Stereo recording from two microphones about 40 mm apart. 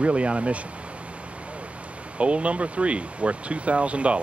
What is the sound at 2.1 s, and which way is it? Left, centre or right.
Speech, right.